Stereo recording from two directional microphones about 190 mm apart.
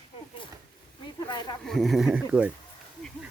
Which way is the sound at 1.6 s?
Centre (ahead or behind).